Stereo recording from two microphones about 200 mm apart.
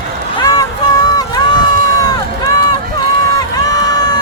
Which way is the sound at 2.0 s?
20° left (ahead or behind).